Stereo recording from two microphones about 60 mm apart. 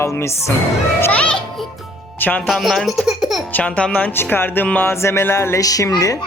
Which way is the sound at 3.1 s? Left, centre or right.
Centre.